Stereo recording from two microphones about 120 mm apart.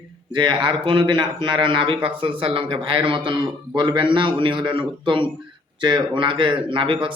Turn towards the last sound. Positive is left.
turn(degrees=-45)  # may be behind; listen again after turning